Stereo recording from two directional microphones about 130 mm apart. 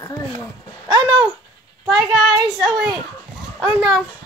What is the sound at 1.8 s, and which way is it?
Speech, centre (ahead or behind).